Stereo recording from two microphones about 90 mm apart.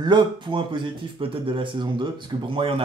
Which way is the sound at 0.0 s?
60° right (ahead or behind).